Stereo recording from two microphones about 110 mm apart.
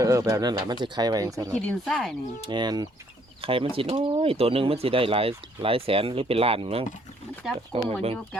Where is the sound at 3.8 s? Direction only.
65° right (ahead or behind).